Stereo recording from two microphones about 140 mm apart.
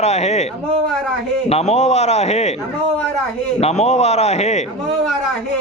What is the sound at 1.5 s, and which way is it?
A man's voice, 50° left (ahead or behind).